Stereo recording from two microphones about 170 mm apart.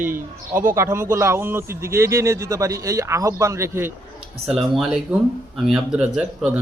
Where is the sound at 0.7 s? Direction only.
15° right (ahead or behind).